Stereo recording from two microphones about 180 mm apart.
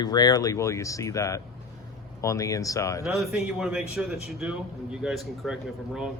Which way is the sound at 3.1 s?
Centre (ahead or behind).